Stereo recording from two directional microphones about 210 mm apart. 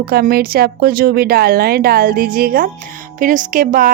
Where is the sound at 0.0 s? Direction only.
45° right (ahead or behind).